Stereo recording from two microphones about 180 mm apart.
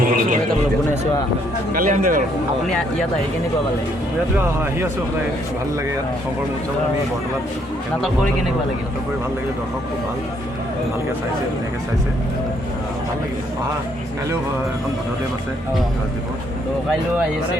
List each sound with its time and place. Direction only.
0.0 s a sound: 50° right (ahead or behind)
1.7 s speech: 50° right (ahead or behind)
4.4 s speech: 15° right (ahead or behind)